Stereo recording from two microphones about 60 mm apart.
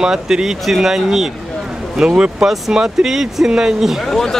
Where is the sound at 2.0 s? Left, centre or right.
Centre.